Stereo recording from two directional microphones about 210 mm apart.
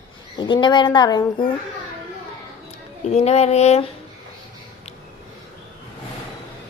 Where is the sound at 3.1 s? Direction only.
30° left (ahead or behind).